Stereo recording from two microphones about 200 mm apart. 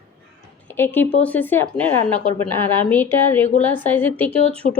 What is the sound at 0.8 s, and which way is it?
Speech, 10° left (ahead or behind).